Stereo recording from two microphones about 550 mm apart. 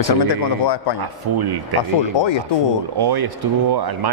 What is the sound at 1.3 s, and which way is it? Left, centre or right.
Speech, right.